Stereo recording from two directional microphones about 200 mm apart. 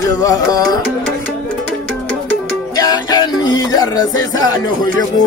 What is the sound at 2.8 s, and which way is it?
Music, 20° left (ahead or behind).